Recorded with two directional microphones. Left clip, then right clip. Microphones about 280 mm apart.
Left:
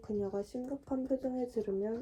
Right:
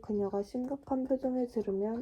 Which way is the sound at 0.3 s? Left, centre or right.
Right.